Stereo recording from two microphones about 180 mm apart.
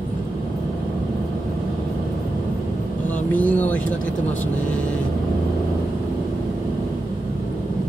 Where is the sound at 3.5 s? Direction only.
10° left (ahead or behind).